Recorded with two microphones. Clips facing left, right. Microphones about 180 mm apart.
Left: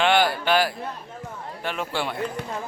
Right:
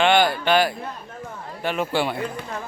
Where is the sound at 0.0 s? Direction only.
5° left (ahead or behind).